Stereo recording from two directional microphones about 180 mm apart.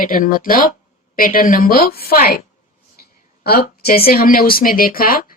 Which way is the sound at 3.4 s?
55° left (ahead or behind).